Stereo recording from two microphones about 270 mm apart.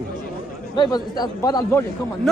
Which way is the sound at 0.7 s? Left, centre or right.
Centre.